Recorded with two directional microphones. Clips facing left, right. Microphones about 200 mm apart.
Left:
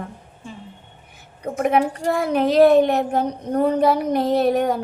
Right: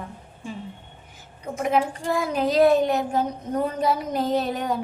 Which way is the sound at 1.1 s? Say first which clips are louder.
Left 5 dB; 60° left (ahead or behind).